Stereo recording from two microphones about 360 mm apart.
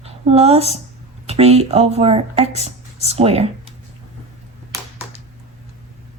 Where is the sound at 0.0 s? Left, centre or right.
Centre.